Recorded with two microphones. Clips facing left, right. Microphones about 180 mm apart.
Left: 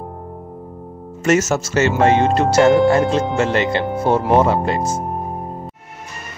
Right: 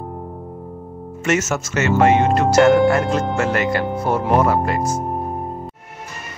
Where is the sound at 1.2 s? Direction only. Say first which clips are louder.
Left 4 dB; 35° left (ahead or behind).